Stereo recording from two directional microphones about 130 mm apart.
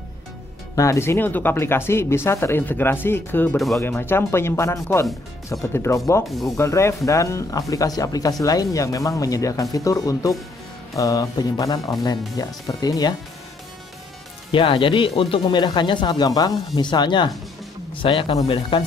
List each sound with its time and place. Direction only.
0.7 s speech: 20° left (ahead or behind)
6.2 s speech: centre (ahead or behind)
6.5 s speech: 20° left (ahead or behind)
14.5 s speech: 40° left (ahead or behind)